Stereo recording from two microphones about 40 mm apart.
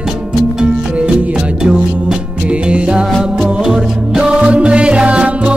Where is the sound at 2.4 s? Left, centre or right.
Right.